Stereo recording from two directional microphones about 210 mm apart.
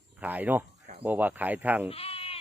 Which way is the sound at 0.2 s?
10° right (ahead or behind).